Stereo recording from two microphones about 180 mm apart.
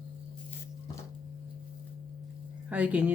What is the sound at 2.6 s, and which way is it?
Speech, 5° right (ahead or behind).